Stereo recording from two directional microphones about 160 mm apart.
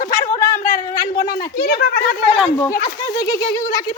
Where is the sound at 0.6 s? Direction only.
60° left (ahead or behind).